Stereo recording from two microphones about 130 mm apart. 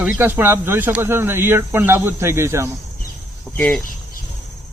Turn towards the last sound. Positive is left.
turn(degrees=10)  # may be behind; listen again after turning